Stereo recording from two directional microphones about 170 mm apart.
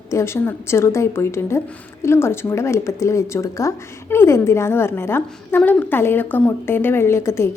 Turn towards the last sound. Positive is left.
turn(degrees=15)  # may be behind; listen again after turning